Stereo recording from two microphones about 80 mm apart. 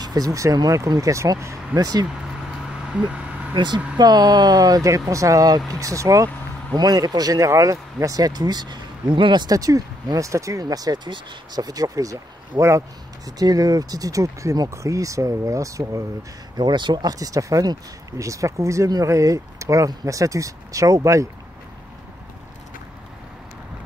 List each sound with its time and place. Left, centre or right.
0.0 s speech: right
1.8 s speech: right
3.5 s speech: right
4.0 s speech: right
9.5 s speech: right
10.6 s speech: right
16.5 s speech: right